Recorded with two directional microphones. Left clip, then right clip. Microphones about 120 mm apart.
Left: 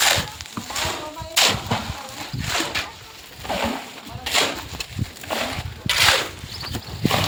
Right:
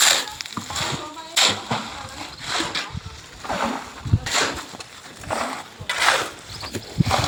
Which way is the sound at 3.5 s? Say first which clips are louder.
Even; 20° right (ahead or behind).